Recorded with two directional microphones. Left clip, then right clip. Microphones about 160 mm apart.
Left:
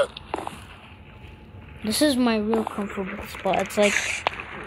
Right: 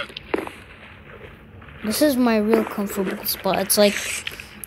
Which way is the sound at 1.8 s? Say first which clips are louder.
Right 2 dB; 10° right (ahead or behind).